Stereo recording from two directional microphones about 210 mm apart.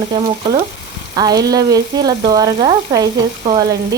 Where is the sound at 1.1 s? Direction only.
20° right (ahead or behind).